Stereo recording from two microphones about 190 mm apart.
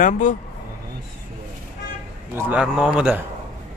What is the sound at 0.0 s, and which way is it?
Speech, 45° left (ahead or behind).